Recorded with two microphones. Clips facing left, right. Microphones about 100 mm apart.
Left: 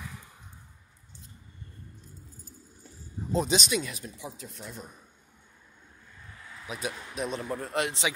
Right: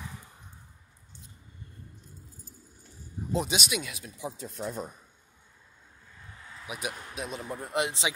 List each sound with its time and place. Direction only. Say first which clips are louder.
3.3 s speech: left 3 dB; 10° right (ahead or behind)
4.2 s speech: right 6 dB; 35° right (ahead or behind)
6.7 s speech: left 1 dB; 15° right (ahead or behind)